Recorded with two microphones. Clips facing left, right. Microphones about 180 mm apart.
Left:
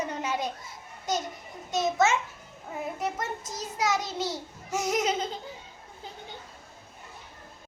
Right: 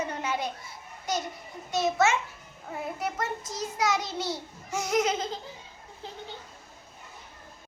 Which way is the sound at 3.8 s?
20° left (ahead or behind).